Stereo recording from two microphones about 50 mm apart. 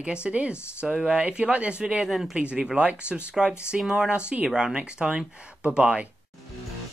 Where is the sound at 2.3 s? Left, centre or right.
Right.